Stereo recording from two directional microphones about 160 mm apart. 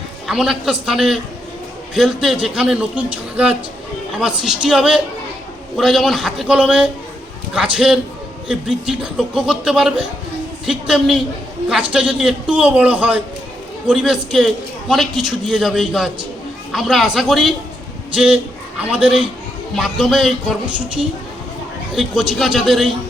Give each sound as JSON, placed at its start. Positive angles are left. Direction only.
{"t": 0.3, "sound": "a man's voice", "side_deg": 0}
{"t": 21.9, "sound": "a man's voice", "side_deg": 0}